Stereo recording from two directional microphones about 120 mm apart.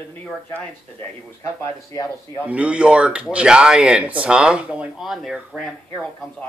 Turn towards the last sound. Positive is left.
turn(degrees=-5)  # may be behind; listen again after turning